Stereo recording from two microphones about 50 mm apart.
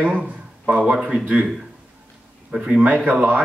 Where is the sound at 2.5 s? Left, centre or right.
Right.